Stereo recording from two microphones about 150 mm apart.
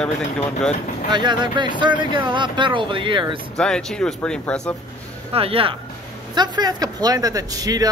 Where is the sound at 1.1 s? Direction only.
30° right (ahead or behind).